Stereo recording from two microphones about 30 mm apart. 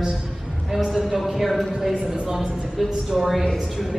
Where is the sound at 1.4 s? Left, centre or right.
Centre.